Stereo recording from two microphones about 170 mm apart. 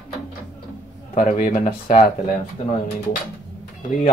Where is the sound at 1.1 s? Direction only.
45° left (ahead or behind).